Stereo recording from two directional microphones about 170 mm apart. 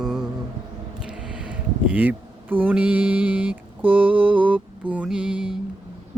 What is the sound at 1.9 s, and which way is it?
Mantra, 10° right (ahead or behind).